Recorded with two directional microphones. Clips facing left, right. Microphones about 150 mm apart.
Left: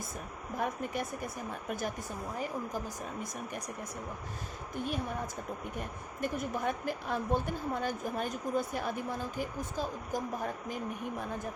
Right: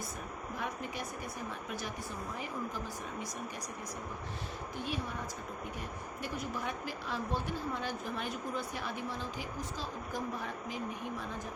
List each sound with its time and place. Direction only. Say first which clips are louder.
0.5 s speech: left 6 dB; 50° left (ahead or behind)
2.4 s speech: left 4 dB; 45° left (ahead or behind)
4.8 s speech: left 4 dB; 50° left (ahead or behind)
6.2 s speech: left 6 dB; 50° left (ahead or behind)